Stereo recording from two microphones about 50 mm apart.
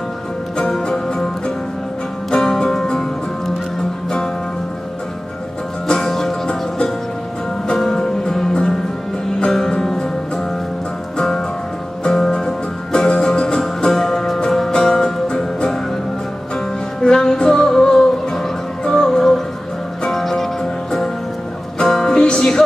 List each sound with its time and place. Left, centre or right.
0.6 s music: centre
2.3 s music: centre
5.9 s music: centre
17.0 s music: centre
21.7 s music: centre